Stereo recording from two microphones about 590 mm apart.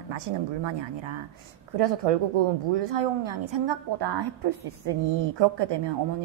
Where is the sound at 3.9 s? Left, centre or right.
Right.